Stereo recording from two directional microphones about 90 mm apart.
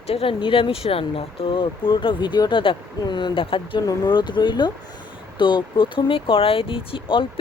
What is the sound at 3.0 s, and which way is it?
Speech, 55° left (ahead or behind).